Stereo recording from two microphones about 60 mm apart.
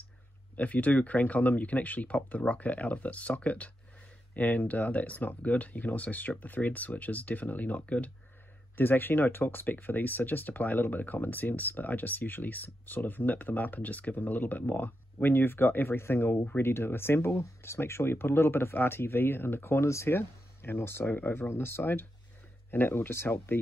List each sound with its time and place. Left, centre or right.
0.6 s speech: left
8.7 s speech: left